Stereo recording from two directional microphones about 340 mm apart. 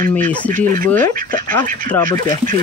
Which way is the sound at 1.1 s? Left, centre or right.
Right.